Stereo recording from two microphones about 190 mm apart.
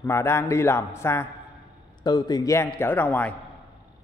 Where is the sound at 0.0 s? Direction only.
15° left (ahead or behind).